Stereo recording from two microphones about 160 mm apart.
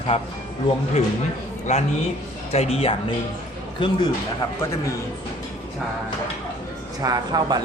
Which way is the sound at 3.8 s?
30° left (ahead or behind).